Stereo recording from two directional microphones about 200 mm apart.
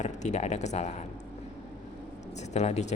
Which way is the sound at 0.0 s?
35° left (ahead or behind).